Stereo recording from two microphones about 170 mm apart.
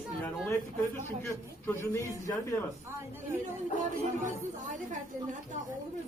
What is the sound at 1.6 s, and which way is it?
Speech, 15° left (ahead or behind).